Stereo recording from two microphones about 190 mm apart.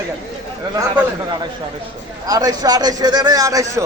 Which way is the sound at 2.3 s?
20° right (ahead or behind).